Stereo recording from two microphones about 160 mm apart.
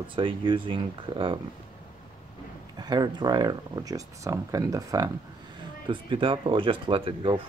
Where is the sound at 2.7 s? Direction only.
25° right (ahead or behind).